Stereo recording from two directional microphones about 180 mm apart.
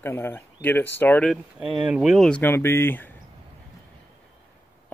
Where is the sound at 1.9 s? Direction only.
5° right (ahead or behind).